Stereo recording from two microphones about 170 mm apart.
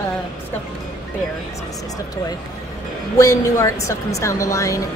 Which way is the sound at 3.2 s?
20° left (ahead or behind).